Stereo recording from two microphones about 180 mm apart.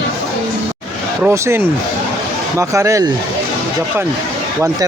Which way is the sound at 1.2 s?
15° right (ahead or behind).